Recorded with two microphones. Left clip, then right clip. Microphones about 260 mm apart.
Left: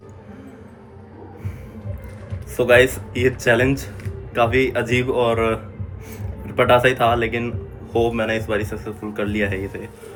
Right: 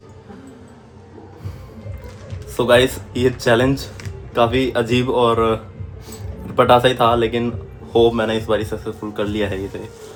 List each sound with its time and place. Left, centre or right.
2.6 s speech: centre
6.6 s speech: centre